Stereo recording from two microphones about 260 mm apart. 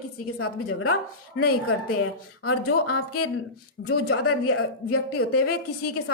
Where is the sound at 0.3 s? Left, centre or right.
Left.